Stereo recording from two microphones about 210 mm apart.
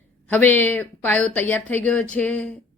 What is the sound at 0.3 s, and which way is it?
A woman's voice, 10° left (ahead or behind).